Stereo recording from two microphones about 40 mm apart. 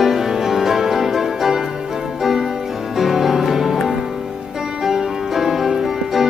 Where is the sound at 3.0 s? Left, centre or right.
Centre.